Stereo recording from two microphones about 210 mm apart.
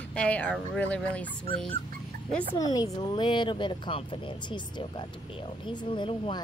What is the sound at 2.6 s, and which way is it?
Speech, 15° left (ahead or behind).